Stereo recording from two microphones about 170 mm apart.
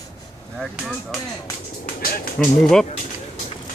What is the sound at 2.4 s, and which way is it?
Speech, 5° left (ahead or behind).